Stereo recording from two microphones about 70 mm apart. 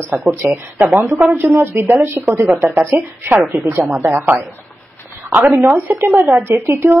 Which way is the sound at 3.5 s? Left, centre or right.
Centre.